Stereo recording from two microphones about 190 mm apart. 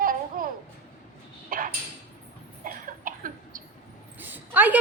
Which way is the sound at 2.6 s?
45° right (ahead or behind).